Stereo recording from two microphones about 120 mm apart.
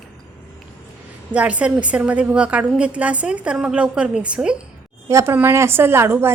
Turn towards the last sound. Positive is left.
turn(degrees=-20)  # may be behind; listen again after turning